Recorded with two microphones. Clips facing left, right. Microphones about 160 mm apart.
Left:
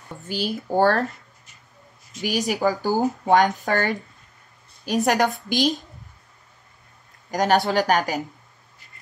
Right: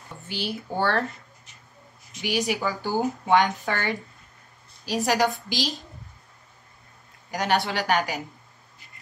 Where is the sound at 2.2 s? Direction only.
45° left (ahead or behind).